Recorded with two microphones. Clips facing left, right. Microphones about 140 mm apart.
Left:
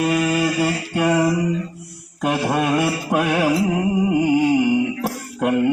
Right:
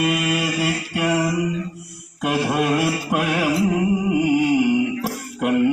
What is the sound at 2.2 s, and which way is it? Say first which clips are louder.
Mantra: left 1 dB; 30° left (ahead or behind).